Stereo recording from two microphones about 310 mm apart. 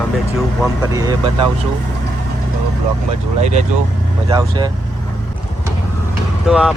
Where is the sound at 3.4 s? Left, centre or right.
Right.